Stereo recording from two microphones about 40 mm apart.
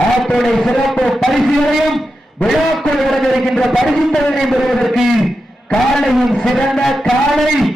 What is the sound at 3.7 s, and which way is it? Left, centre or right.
A man's voice, centre.